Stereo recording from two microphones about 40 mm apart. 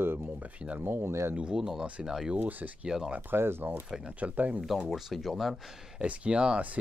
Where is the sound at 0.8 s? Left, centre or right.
Right.